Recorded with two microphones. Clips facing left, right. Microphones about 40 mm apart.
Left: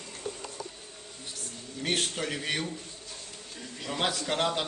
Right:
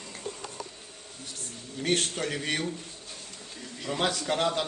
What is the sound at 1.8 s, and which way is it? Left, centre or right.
Speech, centre.